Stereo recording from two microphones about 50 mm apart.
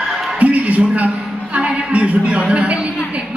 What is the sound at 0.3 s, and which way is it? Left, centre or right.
A man's voice, right.